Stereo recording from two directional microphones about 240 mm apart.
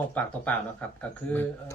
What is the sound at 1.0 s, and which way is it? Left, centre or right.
Speech, centre.